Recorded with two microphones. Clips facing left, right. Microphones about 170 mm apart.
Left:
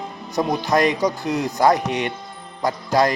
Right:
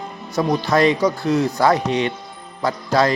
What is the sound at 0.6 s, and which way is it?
Speech, 15° left (ahead or behind).